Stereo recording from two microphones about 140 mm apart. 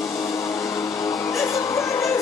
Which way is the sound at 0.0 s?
20° left (ahead or behind).